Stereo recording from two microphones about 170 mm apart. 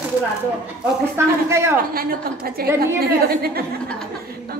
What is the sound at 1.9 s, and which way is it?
A woman's voice, 60° right (ahead or behind).